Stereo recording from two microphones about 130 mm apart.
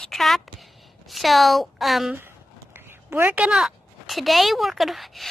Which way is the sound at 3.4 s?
5° right (ahead or behind).